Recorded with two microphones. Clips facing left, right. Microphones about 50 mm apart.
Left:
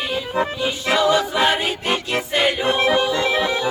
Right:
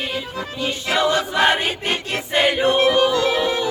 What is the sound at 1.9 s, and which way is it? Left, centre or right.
Music, left.